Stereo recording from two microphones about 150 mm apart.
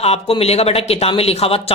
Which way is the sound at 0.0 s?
40° left (ahead or behind).